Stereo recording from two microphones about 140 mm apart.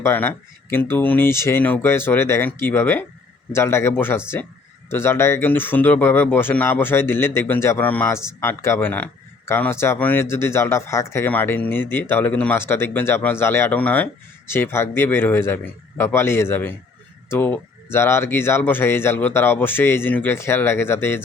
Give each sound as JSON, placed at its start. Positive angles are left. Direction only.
{"t": 0.0, "sound": "speech", "side_deg": 15}